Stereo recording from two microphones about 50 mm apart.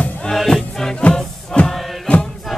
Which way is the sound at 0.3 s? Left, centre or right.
Centre.